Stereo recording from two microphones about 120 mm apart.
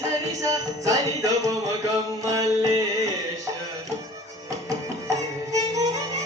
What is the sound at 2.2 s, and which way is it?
Music, 30° right (ahead or behind).